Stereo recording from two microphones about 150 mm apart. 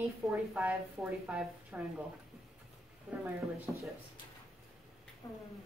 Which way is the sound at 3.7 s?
15° right (ahead or behind).